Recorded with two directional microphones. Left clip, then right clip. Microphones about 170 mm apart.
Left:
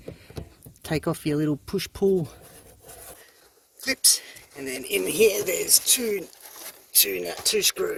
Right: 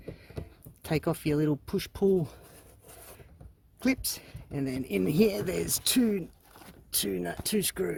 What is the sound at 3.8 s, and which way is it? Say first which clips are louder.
Speech: left 7 dB; 15° right (ahead or behind).